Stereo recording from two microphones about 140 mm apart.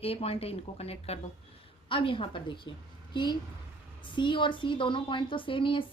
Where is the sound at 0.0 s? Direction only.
45° left (ahead or behind).